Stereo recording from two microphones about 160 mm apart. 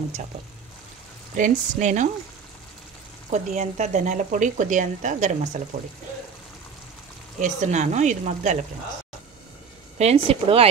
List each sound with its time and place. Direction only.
1.3 s speech: 50° right (ahead or behind)
3.3 s speech: 50° right (ahead or behind)
7.4 s speech: 50° right (ahead or behind)
9.9 s speech: 40° right (ahead or behind)